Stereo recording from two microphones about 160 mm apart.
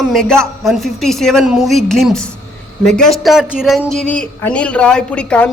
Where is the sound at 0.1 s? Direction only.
5° left (ahead or behind).